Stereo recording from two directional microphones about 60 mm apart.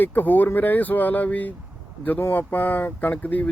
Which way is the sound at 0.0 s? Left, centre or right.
Left.